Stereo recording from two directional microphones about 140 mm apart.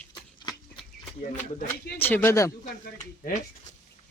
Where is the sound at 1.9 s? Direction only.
15° left (ahead or behind).